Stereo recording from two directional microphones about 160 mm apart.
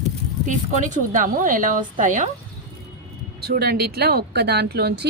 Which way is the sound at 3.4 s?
80° right.